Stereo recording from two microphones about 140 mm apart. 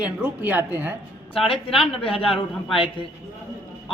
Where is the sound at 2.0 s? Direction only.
40° left (ahead or behind).